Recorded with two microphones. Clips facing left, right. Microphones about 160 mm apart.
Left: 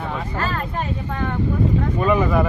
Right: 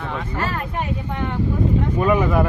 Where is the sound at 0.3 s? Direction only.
15° right (ahead or behind).